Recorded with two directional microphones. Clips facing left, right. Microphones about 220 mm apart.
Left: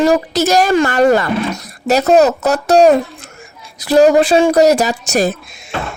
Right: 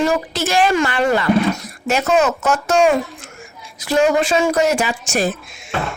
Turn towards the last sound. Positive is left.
turn(degrees=40)  # may be behind; listen again after turning